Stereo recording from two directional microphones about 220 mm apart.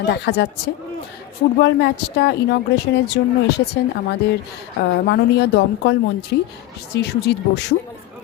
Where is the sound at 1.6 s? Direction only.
50° left (ahead or behind).